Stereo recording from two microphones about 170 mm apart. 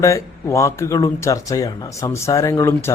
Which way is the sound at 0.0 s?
15° left (ahead or behind).